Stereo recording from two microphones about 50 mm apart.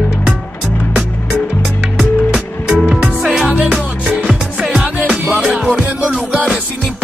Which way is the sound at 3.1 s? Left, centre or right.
Right.